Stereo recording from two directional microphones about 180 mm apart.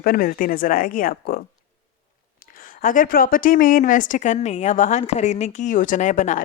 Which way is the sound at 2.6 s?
50° left (ahead or behind).